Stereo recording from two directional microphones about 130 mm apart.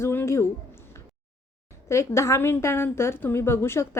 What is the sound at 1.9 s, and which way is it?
A woman's voice, 20° left (ahead or behind).